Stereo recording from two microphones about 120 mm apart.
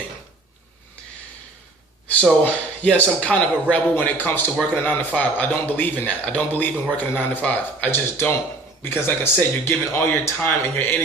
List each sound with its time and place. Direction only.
2.4 s a man's voice: 10° left (ahead or behind)